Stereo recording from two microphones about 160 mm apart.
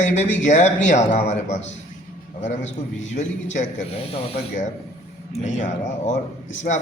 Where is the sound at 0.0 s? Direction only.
50° left (ahead or behind).